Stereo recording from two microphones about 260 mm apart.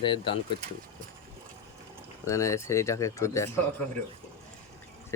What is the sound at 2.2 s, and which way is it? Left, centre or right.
Speech, centre.